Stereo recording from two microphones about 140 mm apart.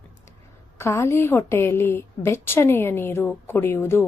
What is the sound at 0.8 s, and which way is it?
A woman's voice, 20° left (ahead or behind).